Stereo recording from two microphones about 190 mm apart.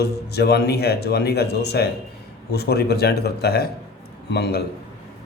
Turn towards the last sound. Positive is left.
turn(degrees=60)  # may be behind; listen again after turning